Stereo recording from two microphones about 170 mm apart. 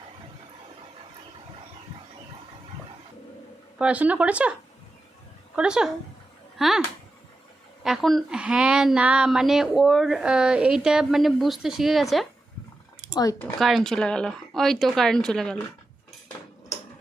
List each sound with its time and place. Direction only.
3.8 s speech: 5° right (ahead or behind)
5.5 s a woman's voice: 5° right (ahead or behind)
7.9 s a woman's voice: centre (ahead or behind)
13.1 s speech: 20° left (ahead or behind)
13.6 s a woman's voice: centre (ahead or behind)